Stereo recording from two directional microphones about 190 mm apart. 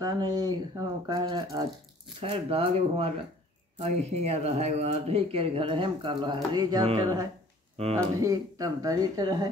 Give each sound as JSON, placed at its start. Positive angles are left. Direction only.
{"t": 0.0, "sound": "speech", "side_deg": -20}
{"t": 8.2, "sound": "speech", "side_deg": -20}